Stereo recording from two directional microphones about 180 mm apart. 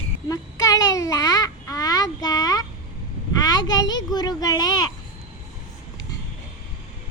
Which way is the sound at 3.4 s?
20° left (ahead or behind).